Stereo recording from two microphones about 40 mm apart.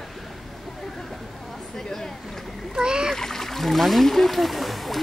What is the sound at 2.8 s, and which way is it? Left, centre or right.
Speech, centre.